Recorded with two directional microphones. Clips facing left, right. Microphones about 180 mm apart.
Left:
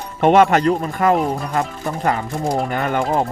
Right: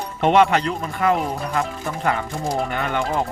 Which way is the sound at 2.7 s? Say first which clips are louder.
Left 3 dB; 45° left (ahead or behind).